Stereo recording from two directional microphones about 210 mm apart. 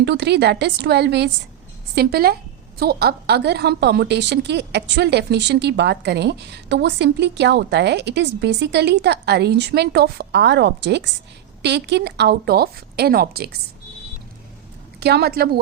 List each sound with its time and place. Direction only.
0.0 s a woman's voice: 55° right (ahead or behind)
15.0 s a woman's voice: 50° right (ahead or behind)